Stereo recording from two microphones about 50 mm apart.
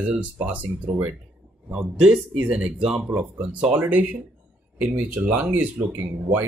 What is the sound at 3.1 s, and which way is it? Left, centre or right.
Speech, right.